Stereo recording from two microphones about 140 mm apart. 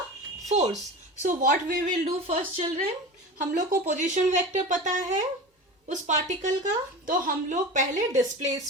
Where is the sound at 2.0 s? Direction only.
45° right (ahead or behind).